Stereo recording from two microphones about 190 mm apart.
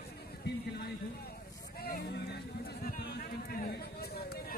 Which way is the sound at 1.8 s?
55° left (ahead or behind).